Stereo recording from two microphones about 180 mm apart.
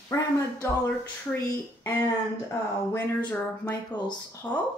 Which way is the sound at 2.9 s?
10° left (ahead or behind).